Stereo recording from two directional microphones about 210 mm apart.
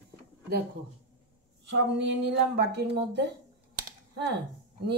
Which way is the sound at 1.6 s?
55° right (ahead or behind).